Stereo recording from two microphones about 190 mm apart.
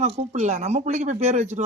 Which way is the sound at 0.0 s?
35° right (ahead or behind).